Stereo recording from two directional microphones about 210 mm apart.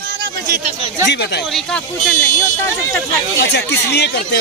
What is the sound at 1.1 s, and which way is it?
Speech, 50° left (ahead or behind).